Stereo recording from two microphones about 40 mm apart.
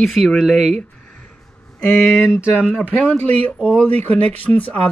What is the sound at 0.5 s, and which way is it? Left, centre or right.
Speech, left.